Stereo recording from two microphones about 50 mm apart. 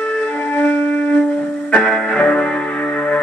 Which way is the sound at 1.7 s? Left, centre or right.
Left.